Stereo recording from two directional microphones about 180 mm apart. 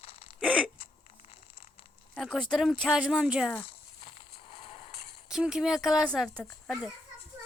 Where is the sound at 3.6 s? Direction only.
30° left (ahead or behind).